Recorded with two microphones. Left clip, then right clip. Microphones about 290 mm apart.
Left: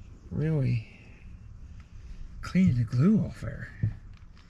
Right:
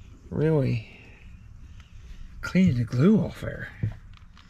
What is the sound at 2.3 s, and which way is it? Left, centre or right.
Speech, centre.